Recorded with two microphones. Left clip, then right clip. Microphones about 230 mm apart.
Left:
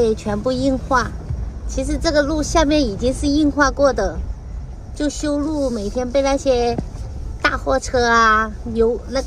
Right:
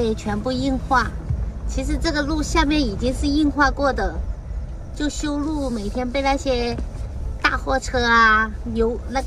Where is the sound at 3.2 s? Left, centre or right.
Left.